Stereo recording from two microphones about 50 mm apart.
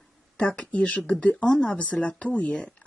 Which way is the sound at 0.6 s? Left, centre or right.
Left.